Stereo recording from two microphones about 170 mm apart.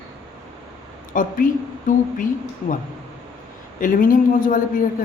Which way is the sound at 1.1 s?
55° left (ahead or behind).